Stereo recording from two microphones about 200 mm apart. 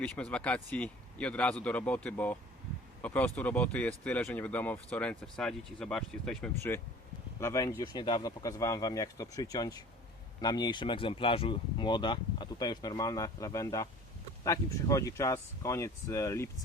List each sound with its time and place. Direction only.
0.0 s speech: 5° left (ahead or behind)